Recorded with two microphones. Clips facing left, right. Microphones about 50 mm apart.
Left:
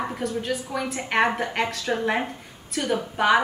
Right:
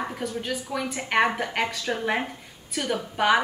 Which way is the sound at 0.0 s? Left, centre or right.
Centre.